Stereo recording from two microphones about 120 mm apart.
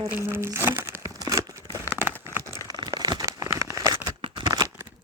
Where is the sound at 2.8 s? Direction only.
35° right (ahead or behind).